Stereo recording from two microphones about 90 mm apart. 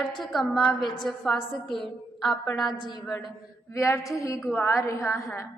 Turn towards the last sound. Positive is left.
turn(degrees=35)  # may be behind; listen again after turning